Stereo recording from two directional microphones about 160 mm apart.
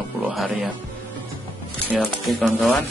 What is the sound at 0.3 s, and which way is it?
Speech, centre (ahead or behind).